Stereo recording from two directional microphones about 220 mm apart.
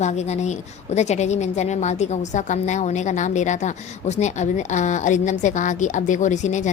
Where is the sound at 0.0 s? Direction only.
30° left (ahead or behind).